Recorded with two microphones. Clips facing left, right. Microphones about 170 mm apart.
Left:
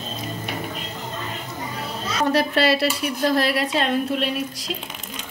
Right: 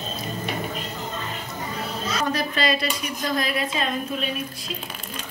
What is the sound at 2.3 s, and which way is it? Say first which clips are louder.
A woman's voice: left 5 dB; 70° left (ahead or behind).